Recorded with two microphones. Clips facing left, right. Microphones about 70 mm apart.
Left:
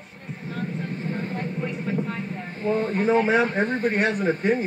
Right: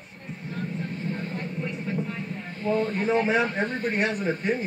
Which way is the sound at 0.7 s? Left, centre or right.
Left.